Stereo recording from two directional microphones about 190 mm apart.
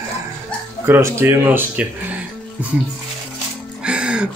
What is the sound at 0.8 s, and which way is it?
Speech, 10° right (ahead or behind).